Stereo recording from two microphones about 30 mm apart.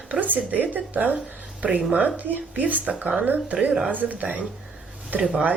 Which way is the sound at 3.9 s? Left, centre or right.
Right.